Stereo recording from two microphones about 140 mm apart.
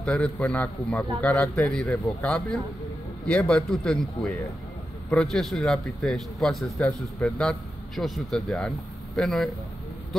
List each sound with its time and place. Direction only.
0.0 s a man's voice: 5° left (ahead or behind)